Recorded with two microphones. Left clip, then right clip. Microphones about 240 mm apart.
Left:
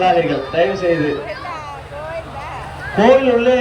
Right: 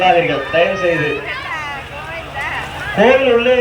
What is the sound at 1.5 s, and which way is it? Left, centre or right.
Vehicle, left.